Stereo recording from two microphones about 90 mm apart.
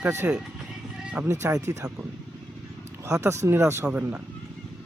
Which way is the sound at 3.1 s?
35° right (ahead or behind).